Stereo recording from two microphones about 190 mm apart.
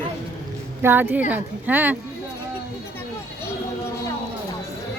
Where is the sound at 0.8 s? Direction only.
10° right (ahead or behind).